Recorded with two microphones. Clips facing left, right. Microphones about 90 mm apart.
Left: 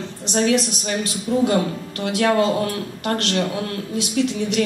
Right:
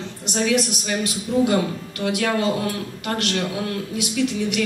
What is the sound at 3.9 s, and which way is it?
Speech, 35° left (ahead or behind).